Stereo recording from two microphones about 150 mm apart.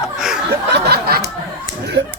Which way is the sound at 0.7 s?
90° right.